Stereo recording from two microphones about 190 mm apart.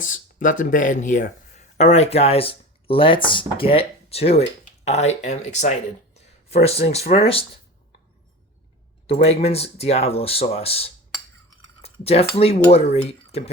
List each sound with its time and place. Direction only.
0.0 s speech: 40° left (ahead or behind)
9.0 s speech: 30° left (ahead or behind)
11.8 s cutlery: 30° left (ahead or behind)
12.4 s speech: 30° left (ahead or behind)